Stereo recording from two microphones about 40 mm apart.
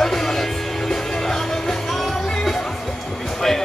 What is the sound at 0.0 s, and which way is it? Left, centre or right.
Music, centre.